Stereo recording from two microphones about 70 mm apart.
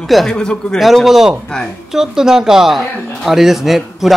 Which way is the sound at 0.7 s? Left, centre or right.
Centre.